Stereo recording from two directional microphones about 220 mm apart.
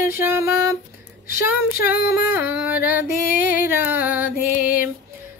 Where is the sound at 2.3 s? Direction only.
5° right (ahead or behind).